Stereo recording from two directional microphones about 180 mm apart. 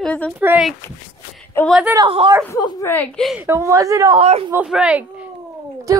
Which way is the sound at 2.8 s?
10° left (ahead or behind).